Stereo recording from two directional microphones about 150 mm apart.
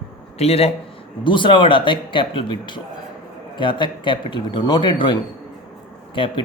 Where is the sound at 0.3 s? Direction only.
45° left (ahead or behind).